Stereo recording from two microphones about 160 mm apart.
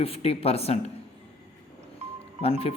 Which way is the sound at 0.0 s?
40° left (ahead or behind).